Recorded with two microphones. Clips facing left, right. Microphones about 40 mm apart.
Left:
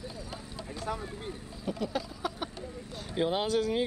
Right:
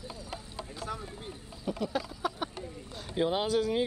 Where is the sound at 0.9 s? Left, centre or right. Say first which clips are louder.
Left 3 dB; left.